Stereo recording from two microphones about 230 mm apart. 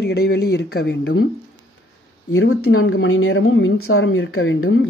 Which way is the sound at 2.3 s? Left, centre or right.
Left.